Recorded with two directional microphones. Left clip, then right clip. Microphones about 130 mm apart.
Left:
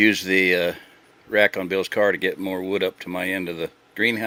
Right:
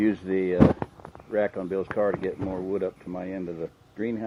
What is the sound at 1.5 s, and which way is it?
Speech, 50° left (ahead or behind).